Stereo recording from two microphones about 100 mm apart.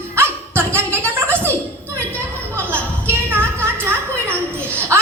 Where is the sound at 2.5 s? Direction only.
20° right (ahead or behind).